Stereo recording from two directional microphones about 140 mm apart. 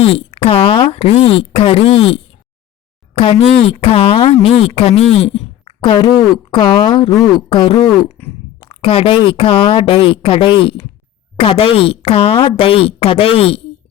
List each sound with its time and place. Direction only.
0.0 s a woman's voice: 40° left (ahead or behind)
8.2 s a sound: 10° left (ahead or behind)
8.6 s a woman's voice: 40° left (ahead or behind)